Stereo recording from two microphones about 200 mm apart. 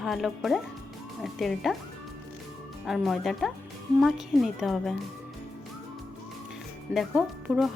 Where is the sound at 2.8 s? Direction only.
Centre (ahead or behind).